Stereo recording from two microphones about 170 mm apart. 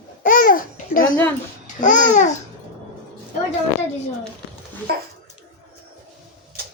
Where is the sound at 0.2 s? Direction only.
55° left (ahead or behind).